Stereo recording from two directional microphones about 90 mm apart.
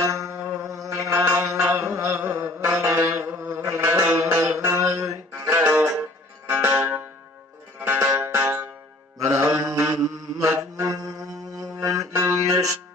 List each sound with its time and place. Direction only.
0.1 s a sound: 35° right (ahead or behind)
1.1 s mantra: 25° right (ahead or behind)
7.8 s music: 25° right (ahead or behind)
9.2 s mantra: 30° right (ahead or behind)
10.9 s mantra: 40° right (ahead or behind)
12.1 s mantra: 25° right (ahead or behind)